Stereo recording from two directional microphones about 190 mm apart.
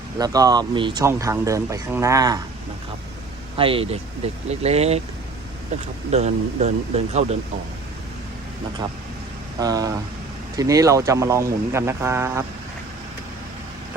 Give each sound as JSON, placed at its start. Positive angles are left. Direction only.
{"t": 0.2, "sound": "speech", "side_deg": -20}
{"t": 3.6, "sound": "speech", "side_deg": -30}
{"t": 6.1, "sound": "speech", "side_deg": -35}
{"t": 9.6, "sound": "speech", "side_deg": -20}